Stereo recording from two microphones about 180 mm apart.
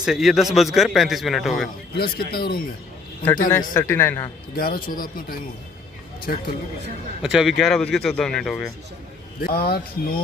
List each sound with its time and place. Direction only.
0.0 s a man's voice: 5° right (ahead or behind)
2.0 s speech: 60° left (ahead or behind)
3.4 s speech: 15° left (ahead or behind)
4.8 s speech: 50° left (ahead or behind)
7.2 s a man's voice: centre (ahead or behind)
9.4 s speech: 60° left (ahead or behind)